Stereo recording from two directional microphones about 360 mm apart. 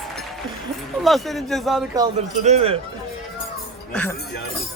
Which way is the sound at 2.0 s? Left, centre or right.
Centre.